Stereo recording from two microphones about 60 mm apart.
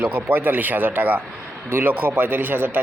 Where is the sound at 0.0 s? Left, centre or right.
Right.